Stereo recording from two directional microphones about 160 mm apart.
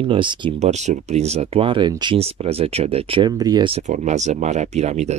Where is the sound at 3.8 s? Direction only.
50° right (ahead or behind).